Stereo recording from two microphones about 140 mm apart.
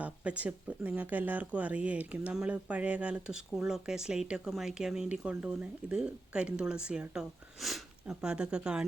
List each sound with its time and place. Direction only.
0.0 s speech: 10° right (ahead or behind)